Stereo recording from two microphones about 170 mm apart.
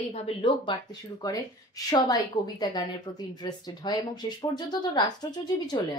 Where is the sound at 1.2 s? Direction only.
20° left (ahead or behind).